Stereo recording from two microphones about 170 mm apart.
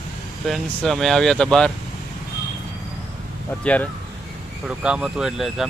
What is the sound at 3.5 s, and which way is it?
Speech, 10° left (ahead or behind).